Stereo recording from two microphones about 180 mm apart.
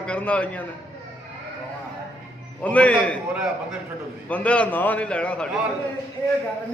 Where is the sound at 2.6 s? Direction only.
10° left (ahead or behind).